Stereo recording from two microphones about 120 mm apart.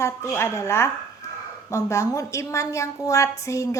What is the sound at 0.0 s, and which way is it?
A woman's voice, 20° left (ahead or behind).